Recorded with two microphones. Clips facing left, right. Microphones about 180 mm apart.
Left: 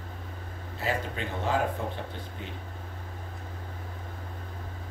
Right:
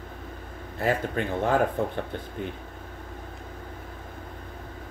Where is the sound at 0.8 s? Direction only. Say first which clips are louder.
Right 6 dB; 55° right (ahead or behind).